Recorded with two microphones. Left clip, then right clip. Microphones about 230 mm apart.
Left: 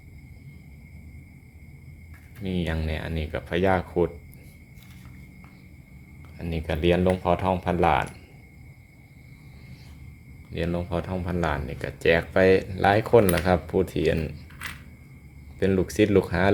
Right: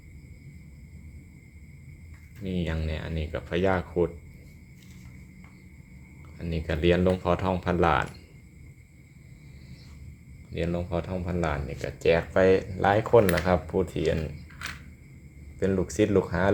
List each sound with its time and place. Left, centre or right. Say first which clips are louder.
2.4 s speech: left 3 dB; centre
6.3 s speech: left 2 dB; centre
10.5 s speech: left 1 dB; centre
15.5 s speech: left 3 dB; centre